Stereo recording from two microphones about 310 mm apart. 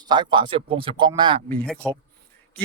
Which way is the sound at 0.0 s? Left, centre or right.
Centre.